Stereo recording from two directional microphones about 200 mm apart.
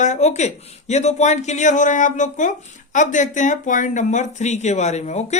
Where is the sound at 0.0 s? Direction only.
35° left (ahead or behind).